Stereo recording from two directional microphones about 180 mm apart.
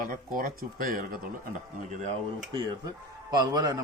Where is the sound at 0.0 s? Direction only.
50° right (ahead or behind).